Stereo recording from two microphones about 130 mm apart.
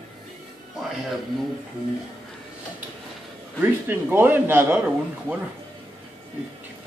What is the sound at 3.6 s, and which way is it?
A man's voice, 15° right (ahead or behind).